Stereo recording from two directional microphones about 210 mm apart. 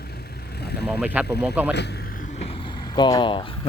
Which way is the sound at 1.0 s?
5° right (ahead or behind).